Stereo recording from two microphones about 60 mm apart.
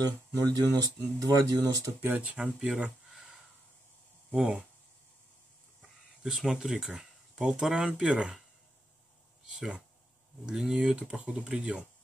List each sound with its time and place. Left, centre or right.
0.0 s speech: right
0.6 s speech: right
2.0 s speech: right
4.3 s speech: right
5.8 s a sound: centre
7.0 s speech: centre
9.5 s speech: centre